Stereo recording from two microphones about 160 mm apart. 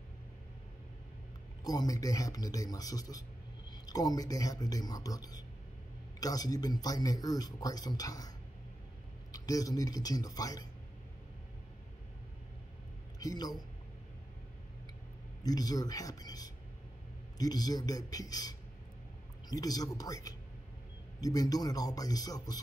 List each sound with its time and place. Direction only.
1.6 s speech: 25° left (ahead or behind)
9.3 s speech: 20° left (ahead or behind)
13.2 s speech: 25° left (ahead or behind)
15.4 s speech: 25° left (ahead or behind)